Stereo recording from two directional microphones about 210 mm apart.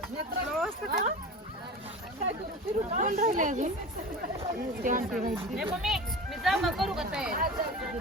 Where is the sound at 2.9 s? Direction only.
40° right (ahead or behind).